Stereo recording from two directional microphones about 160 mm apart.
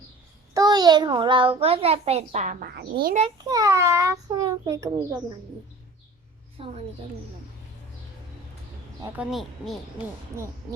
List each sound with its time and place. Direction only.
0.5 s a child's voice: 25° right (ahead or behind); by 2.6 s 50° right (ahead or behind)
2.7 s speech: 70° right (ahead or behind)
3.4 s a child's voice: 20° right (ahead or behind)
6.6 s a woman's voice: 40° right (ahead or behind)
9.1 s speech: centre (ahead or behind)